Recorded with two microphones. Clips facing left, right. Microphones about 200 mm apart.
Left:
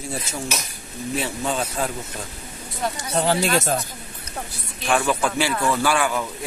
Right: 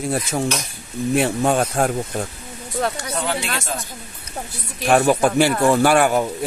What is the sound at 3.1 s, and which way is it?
Speech, 35° left (ahead or behind).